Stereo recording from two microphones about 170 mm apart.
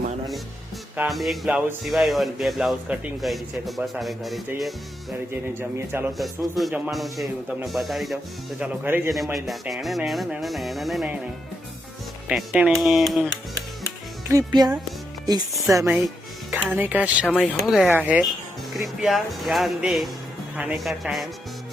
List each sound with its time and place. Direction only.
0.9 s speech: centre (ahead or behind)
5.3 s speech: 15° right (ahead or behind)
6.1 s speech: centre (ahead or behind)
9.1 s speech: centre (ahead or behind)
12.3 s speech: 5° right (ahead or behind)
14.3 s speech: 20° right (ahead or behind)
16.5 s speech: 10° right (ahead or behind)
17.3 s speech: 5° left (ahead or behind)